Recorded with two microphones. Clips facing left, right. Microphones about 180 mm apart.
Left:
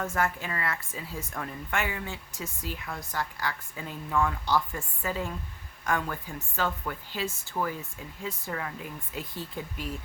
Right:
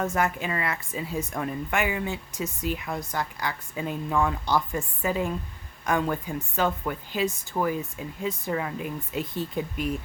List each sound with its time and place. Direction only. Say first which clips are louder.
0.0 s a woman's voice: right 4 dB; 20° right (ahead or behind)